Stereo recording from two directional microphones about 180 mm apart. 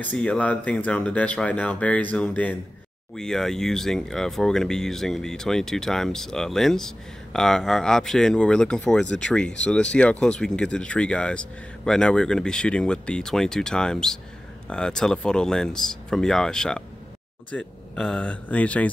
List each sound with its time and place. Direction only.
0.0 s speech: 5° left (ahead or behind)